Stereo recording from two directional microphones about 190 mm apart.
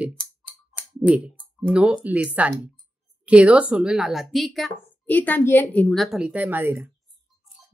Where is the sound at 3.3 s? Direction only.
5° right (ahead or behind).